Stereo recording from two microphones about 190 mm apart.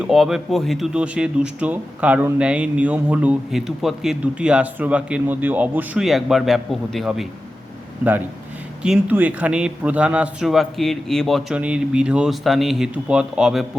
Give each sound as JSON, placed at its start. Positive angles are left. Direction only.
{"t": 0.0, "sound": "speech", "side_deg": 0}
{"t": 8.8, "sound": "speech", "side_deg": -5}